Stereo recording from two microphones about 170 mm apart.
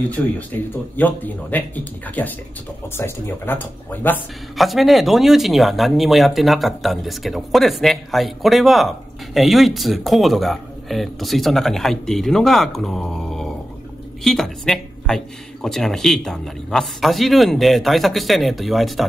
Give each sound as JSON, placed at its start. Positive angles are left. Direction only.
{"t": 0.2, "sound": "speech", "side_deg": 10}
{"t": 4.6, "sound": "speech", "side_deg": 0}